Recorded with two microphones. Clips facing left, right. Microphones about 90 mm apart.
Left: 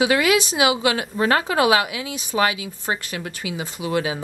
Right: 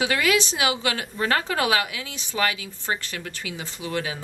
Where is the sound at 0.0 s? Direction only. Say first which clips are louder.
Left 4 dB; 10° left (ahead or behind).